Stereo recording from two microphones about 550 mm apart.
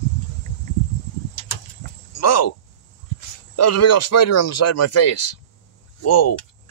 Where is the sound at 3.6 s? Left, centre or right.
Left.